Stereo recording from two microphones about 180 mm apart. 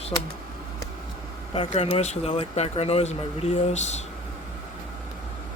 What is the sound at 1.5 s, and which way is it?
Speech, 30° left (ahead or behind).